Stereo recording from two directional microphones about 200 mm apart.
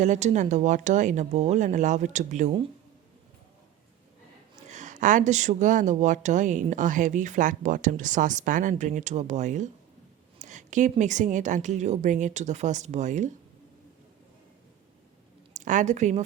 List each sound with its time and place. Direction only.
0.0 s speech: 35° right (ahead or behind)
4.7 s speech: 40° right (ahead or behind)
15.5 s speech: 40° right (ahead or behind)